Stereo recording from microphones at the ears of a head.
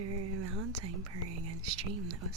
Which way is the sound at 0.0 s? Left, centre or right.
Right.